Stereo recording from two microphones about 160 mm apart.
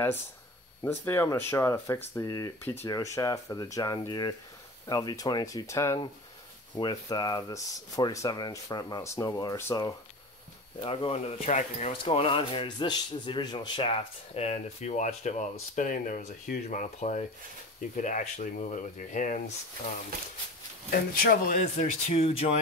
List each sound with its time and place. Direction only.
0.8 s speech: 15° left (ahead or behind)
10.8 s speech: 35° left (ahead or behind); by 19.5 s 50° left (ahead or behind)
20.9 s speech: 65° left (ahead or behind); by 22.5 s 40° left (ahead or behind)